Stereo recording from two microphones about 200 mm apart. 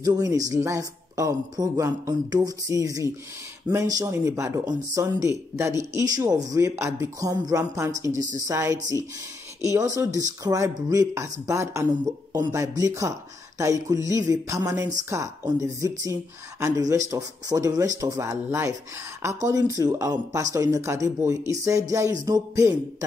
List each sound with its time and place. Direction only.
0.0 s speech: 20° right (ahead or behind)